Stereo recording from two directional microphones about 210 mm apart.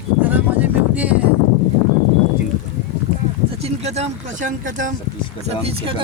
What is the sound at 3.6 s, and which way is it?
Speech, 30° right (ahead or behind).